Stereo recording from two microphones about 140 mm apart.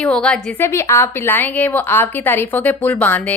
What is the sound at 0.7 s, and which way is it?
A woman's voice, 20° left (ahead or behind).